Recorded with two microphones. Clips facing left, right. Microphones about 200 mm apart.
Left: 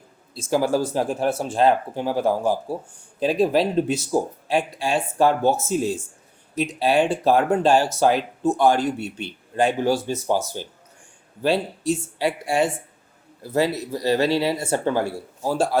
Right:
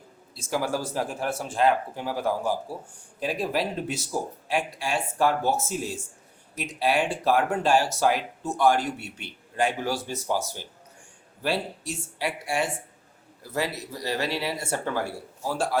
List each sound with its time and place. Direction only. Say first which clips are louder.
0.3 s speech: left 7 dB; 25° left (ahead or behind)
12.2 s speech: left 5 dB; 25° left (ahead or behind)